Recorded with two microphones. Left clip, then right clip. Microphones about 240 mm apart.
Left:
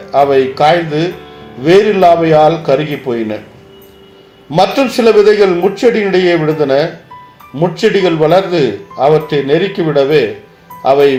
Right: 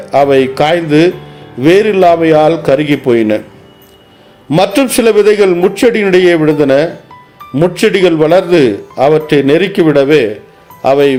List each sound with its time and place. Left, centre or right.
0.1 s speech: right
4.5 s speech: right